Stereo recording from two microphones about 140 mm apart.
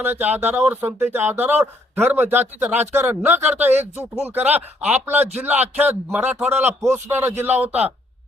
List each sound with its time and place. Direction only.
0.0 s speech: 15° right (ahead or behind)